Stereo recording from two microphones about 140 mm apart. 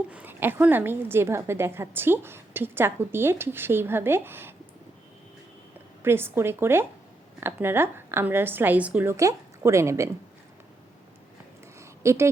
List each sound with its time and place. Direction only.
0.1 s a woman's voice: 10° right (ahead or behind)
6.0 s a woman's voice: 15° right (ahead or behind)
11.8 s a sound: 20° right (ahead or behind)